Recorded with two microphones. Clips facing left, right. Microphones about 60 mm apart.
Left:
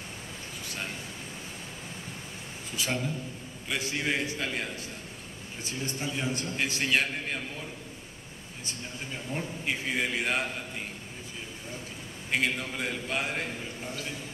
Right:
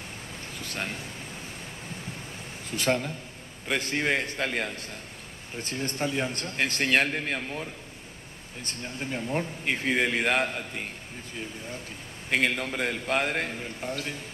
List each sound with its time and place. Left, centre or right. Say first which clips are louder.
0.6 s a sound: right 4 dB; right
2.7 s a man's voice: right 5 dB; right
8.6 s a man's voice: right 5 dB; right
12.3 s a man's voice: right 3 dB; right